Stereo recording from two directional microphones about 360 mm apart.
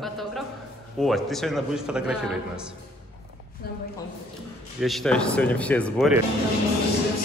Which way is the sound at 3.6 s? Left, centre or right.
Left.